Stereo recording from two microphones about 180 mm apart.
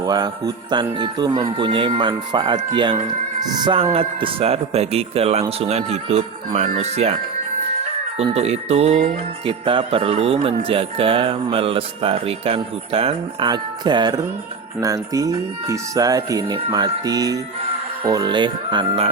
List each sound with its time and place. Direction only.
0.0 s speech: 20° right (ahead or behind)
3.9 s jingle bell: 30° right (ahead or behind)
8.2 s jingle bell: 35° right (ahead or behind)
14.8 s speech: 20° right (ahead or behind)